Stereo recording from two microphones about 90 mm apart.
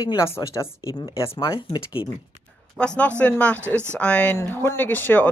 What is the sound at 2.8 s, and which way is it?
Speech, 15° left (ahead or behind).